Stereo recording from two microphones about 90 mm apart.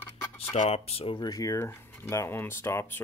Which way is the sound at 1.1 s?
45° left (ahead or behind).